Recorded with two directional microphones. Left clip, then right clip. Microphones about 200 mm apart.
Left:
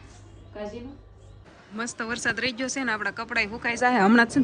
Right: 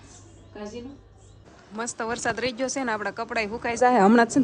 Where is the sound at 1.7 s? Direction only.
30° right (ahead or behind).